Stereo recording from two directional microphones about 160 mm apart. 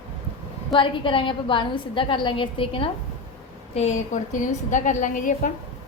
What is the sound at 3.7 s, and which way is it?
A woman's voice, 45° left (ahead or behind).